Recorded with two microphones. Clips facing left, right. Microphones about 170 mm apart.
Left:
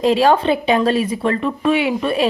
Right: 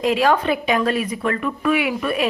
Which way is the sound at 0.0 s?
30° left (ahead or behind).